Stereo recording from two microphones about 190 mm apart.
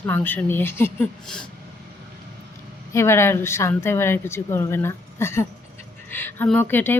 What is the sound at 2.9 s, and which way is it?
Speech, 15° left (ahead or behind).